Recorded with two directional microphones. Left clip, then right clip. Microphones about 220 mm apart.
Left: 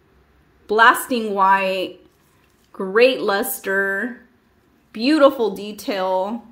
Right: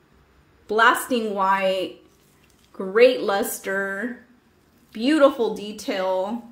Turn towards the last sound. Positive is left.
turn(degrees=15)  # may be behind; listen again after turning